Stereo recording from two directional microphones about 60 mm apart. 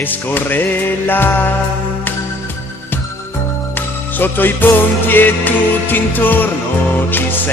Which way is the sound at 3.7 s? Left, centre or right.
Left.